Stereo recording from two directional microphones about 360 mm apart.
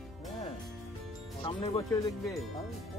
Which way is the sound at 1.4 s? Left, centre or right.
Centre.